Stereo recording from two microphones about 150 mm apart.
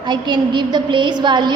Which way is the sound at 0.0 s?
30° right (ahead or behind).